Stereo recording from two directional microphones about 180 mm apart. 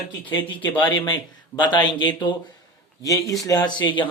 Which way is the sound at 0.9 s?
25° left (ahead or behind).